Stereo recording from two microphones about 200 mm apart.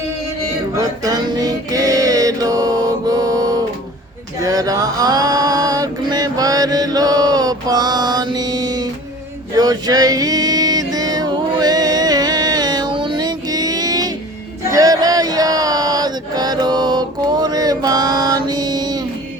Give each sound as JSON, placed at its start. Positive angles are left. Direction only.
{"t": 0.8, "sound": "music", "side_deg": -20}
{"t": 4.4, "sound": "a sound", "side_deg": -15}
{"t": 9.6, "sound": "music", "side_deg": -20}
{"t": 14.7, "sound": "chant", "side_deg": -15}